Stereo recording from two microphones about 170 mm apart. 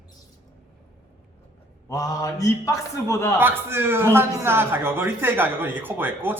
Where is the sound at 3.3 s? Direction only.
10° right (ahead or behind).